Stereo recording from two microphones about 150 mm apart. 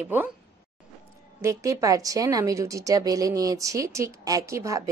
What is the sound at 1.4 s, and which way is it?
Speech, 20° right (ahead or behind).